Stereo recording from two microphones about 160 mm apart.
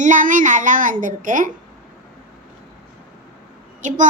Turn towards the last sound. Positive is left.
turn(degrees=-50)  # may be behind; listen again after turning